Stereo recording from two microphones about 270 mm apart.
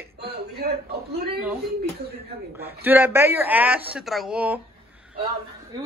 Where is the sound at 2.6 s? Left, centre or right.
Centre.